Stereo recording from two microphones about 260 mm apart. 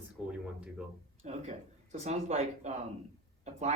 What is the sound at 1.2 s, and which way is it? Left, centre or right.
A man's voice, right.